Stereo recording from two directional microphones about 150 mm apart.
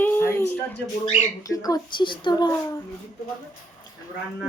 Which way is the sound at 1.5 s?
25° left (ahead or behind).